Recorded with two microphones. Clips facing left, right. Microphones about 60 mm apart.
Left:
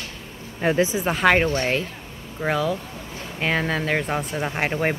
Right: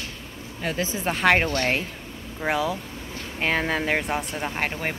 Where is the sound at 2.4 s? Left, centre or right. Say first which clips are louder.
Left 2 dB; centre.